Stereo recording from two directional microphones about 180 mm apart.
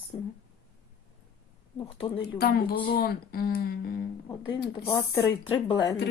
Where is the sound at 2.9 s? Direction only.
55° left (ahead or behind).